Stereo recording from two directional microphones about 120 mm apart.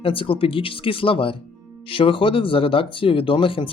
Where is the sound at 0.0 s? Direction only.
50° left (ahead or behind).